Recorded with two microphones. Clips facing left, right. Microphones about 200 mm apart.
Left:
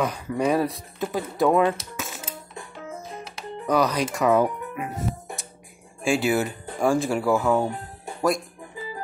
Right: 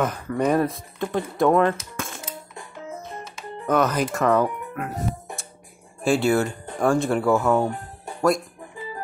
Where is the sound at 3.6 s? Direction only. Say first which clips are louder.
Right 1 dB; 5° right (ahead or behind).